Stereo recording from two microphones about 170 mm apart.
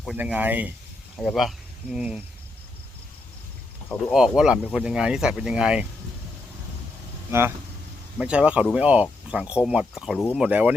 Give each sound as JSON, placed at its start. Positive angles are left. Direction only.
{"t": 0.0, "sound": "speech", "side_deg": -5}
{"t": 4.1, "sound": "speech", "side_deg": -5}
{"t": 7.3, "sound": "speech", "side_deg": -15}